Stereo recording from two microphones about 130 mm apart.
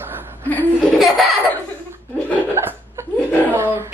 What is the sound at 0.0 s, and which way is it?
Chuckle, 15° right (ahead or behind).